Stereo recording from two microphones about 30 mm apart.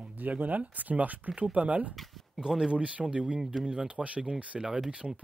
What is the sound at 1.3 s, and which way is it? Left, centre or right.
Speech, right.